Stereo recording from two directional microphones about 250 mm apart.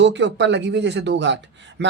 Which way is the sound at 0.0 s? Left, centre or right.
Right.